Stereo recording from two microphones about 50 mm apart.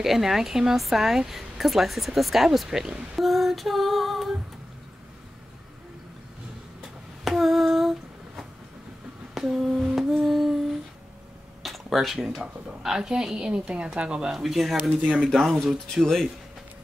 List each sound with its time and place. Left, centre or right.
0.0 s speech: centre
7.2 s humming: centre
9.4 s humming: centre
11.6 s a sound: centre
12.8 s a woman's voice: centre
14.3 s speech: centre
15.9 s speech: centre